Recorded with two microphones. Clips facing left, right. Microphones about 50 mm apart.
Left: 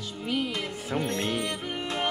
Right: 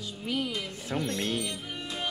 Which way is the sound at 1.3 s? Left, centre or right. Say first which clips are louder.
Left 4 dB; left.